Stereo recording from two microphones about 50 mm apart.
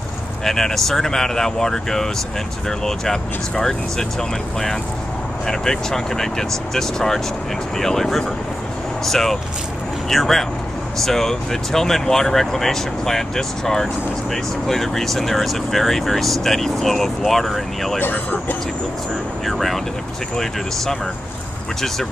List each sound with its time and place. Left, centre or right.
0.4 s speech: centre
18.0 s speech: left
19.4 s speech: centre